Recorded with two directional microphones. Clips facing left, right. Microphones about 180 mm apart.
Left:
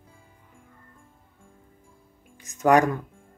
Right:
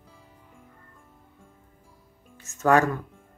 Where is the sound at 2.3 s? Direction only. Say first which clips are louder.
Left 2 dB; 15° left (ahead or behind).